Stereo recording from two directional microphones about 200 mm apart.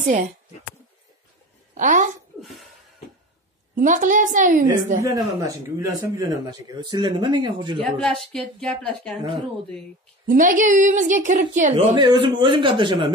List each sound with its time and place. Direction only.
1.8 s a woman's voice: 40° right (ahead or behind)
2.4 s a sound: centre (ahead or behind)
3.7 s a woman's voice: 40° right (ahead or behind)
5.0 s a man's voice: 15° right (ahead or behind)
7.8 s a woman's voice: centre (ahead or behind)
9.1 s a man's voice: 25° right (ahead or behind)
10.2 s a woman's voice: 40° right (ahead or behind)
11.9 s a man's voice: 20° right (ahead or behind)